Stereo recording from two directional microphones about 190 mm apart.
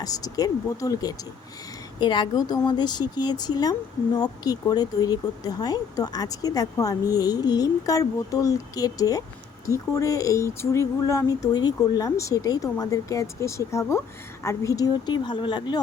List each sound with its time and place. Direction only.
0.0 s speech: 20° left (ahead or behind)